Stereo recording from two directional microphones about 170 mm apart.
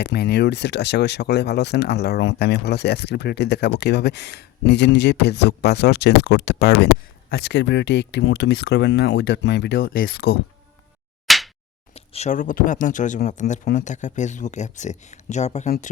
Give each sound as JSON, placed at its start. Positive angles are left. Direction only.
{"t": 0.0, "sound": "speech", "side_deg": 80}
{"t": 11.3, "sound": "a sound", "side_deg": 0}
{"t": 11.9, "sound": "speech", "side_deg": 40}